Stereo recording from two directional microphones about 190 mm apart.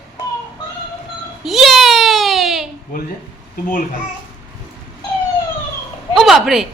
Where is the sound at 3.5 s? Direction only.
45° left (ahead or behind).